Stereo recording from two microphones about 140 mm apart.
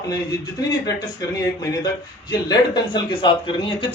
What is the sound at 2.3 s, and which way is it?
Speech, 30° left (ahead or behind).